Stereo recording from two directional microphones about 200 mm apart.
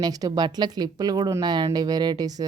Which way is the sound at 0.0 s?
20° right (ahead or behind).